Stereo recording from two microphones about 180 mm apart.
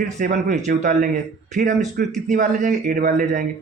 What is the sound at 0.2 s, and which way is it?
Speech, 45° right (ahead or behind).